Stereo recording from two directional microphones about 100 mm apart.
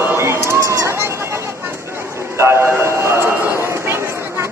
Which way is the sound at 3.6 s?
25° right (ahead or behind).